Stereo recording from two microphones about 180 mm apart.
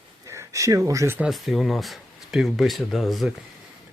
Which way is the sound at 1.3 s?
Centre (ahead or behind).